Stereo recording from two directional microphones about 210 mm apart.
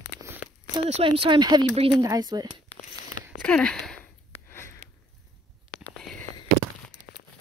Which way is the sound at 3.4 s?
5° left (ahead or behind).